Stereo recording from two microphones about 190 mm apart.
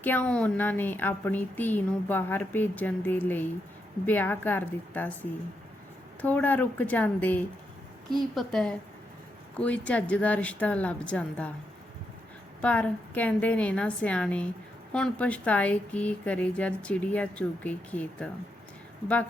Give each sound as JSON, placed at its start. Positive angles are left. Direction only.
{"t": 0.0, "sound": "a woman's voice", "side_deg": 10}
{"t": 12.6, "sound": "a woman's voice", "side_deg": 5}